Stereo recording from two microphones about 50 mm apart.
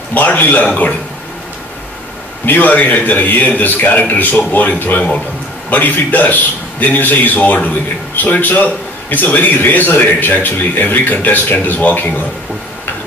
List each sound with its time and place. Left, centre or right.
0.1 s a man's voice: left
2.4 s a man's voice: left